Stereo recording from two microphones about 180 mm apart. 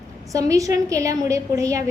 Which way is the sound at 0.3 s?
20° right (ahead or behind).